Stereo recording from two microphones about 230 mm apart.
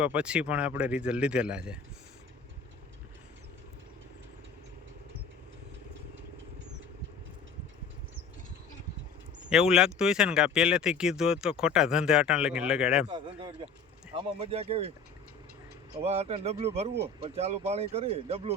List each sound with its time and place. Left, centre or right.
0.0 s speech: centre
9.5 s speech: centre
13.1 s speech: right
16.0 s speech: right